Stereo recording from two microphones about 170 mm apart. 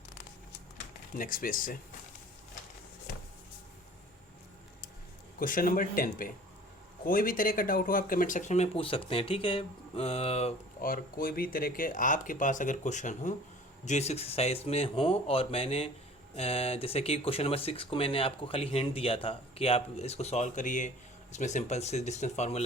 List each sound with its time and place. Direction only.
1.2 s a man's voice: 55° left (ahead or behind)
5.4 s a man's voice: 55° left (ahead or behind); by 10.5 s 35° left (ahead or behind)
10.8 s speech: 55° left (ahead or behind); by 22.6 s 40° left (ahead or behind)